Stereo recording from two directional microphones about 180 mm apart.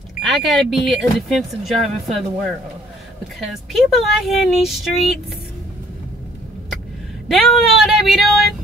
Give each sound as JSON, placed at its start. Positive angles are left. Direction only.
{"t": 0.2, "sound": "speech", "side_deg": 0}
{"t": 7.2, "sound": "speech", "side_deg": 0}